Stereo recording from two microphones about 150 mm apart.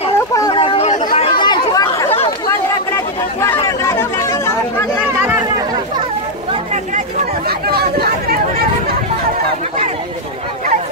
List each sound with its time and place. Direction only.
0.3 s chatter: 25° left (ahead or behind)
0.6 s chatter: 40° left (ahead or behind)
1.4 s chatter: 25° left (ahead or behind)
3.3 s chatter: 20° left (ahead or behind)
7.4 s chatter: 90° right